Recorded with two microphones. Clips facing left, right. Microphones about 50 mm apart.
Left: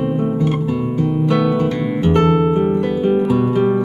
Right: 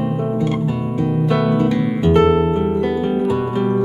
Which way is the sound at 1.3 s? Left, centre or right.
Centre.